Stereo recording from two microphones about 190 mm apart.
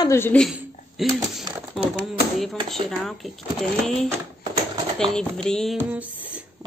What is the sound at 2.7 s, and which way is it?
Speech, centre (ahead or behind).